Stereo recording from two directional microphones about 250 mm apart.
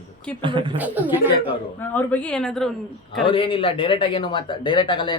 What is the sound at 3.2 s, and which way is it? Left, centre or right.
A man's voice, left.